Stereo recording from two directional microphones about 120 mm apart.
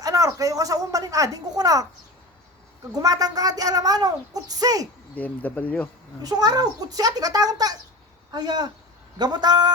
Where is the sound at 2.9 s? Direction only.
30° right (ahead or behind).